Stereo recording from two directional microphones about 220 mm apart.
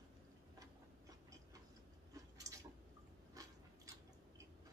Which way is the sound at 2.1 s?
15° right (ahead or behind).